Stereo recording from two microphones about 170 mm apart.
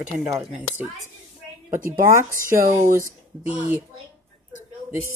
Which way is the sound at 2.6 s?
55° right (ahead or behind).